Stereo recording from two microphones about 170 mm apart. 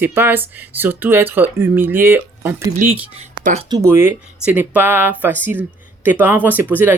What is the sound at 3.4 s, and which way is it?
Speech, 45° right (ahead or behind).